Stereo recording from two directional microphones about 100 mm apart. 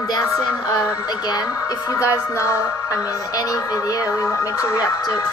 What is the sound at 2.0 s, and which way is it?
Music, 30° left (ahead or behind).